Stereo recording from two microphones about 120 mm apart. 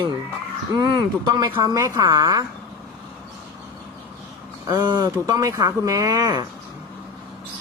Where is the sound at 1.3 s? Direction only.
40° right (ahead or behind).